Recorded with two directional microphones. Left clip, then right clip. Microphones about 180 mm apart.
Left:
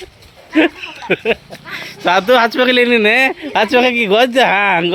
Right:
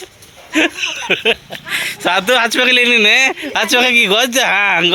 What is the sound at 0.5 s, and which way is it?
Speech, 25° left (ahead or behind).